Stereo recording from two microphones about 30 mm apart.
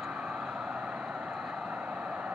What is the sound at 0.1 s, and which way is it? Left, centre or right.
Vehicle, right.